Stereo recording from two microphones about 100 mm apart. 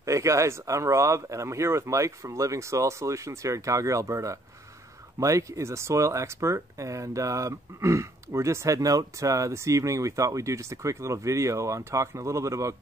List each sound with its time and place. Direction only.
0.0 s speech: 30° right (ahead or behind)